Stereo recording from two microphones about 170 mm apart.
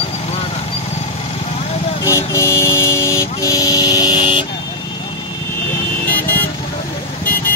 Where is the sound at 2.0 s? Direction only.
20° left (ahead or behind).